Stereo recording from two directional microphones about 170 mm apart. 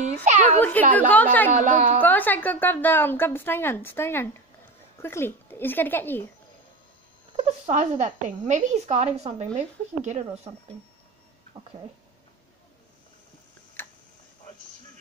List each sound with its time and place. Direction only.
0.0 s a sound: 45° right (ahead or behind)
0.6 s a woman's voice: 10° left (ahead or behind)
1.5 s speech: 45° right (ahead or behind)
2.0 s a woman's voice: 10° left (ahead or behind)
7.3 s speech: 40° right (ahead or behind)
13.8 s tick-tock: 10° left (ahead or behind)